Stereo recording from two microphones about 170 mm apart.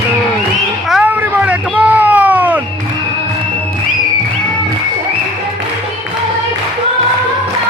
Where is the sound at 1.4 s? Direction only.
10° right (ahead or behind).